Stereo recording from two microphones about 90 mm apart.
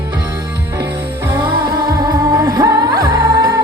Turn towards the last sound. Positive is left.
turn(degrees=-40)  # may be behind; listen again after turning